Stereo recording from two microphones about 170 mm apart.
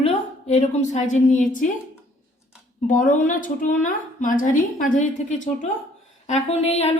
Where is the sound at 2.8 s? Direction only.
50° left (ahead or behind).